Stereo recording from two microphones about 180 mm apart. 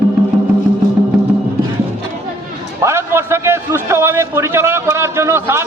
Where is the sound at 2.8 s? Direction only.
15° right (ahead or behind).